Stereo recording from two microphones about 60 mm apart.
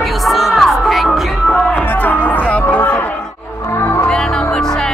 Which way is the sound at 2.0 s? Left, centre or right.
Left.